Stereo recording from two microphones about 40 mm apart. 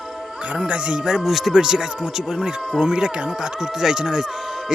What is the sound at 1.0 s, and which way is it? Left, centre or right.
Speech, centre.